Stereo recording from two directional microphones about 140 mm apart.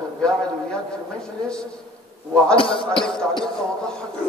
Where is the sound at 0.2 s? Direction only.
5° left (ahead or behind).